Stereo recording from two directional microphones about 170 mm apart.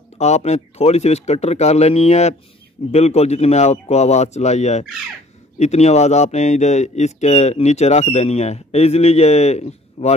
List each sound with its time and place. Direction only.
0.2 s speech: 40° left (ahead or behind)